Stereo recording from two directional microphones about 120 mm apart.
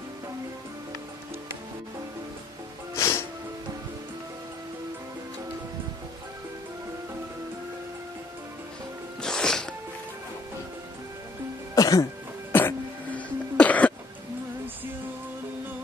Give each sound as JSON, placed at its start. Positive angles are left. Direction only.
{"t": 3.0, "sound": "music", "side_deg": 20}
{"t": 9.2, "sound": "music", "side_deg": 5}
{"t": 11.7, "sound": "music", "side_deg": 30}
{"t": 12.5, "sound": "cough", "side_deg": 15}